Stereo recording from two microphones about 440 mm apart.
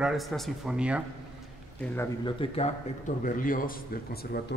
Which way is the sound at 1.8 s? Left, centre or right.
Centre.